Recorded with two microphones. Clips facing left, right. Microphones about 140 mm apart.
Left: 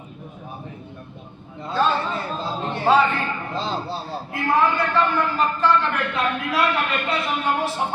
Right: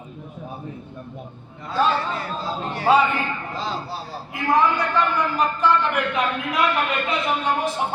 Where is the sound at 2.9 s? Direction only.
10° right (ahead or behind).